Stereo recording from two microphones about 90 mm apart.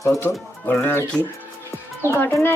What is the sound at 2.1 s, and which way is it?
Speech, 25° left (ahead or behind).